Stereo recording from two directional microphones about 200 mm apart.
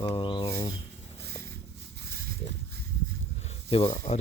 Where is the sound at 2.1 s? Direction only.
50° right (ahead or behind).